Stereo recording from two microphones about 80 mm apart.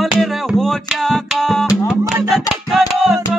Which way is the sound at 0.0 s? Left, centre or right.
Centre.